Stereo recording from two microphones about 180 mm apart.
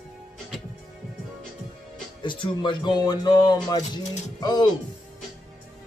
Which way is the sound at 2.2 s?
25° left (ahead or behind).